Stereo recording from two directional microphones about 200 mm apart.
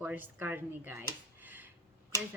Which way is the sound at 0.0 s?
10° right (ahead or behind).